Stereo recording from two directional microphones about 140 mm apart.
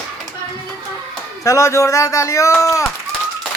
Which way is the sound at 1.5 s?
20° left (ahead or behind).